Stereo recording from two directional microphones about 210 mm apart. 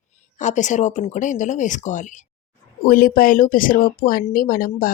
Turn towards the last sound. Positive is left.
turn(degrees=40)  # may be behind; listen again after turning